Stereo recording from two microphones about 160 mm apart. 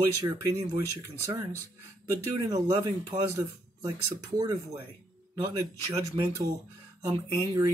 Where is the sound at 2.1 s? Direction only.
20° right (ahead or behind).